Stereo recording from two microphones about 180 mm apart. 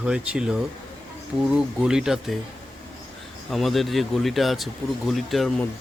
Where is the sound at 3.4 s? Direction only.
Centre (ahead or behind).